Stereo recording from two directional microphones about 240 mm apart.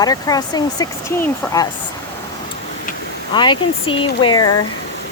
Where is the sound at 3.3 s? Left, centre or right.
Centre.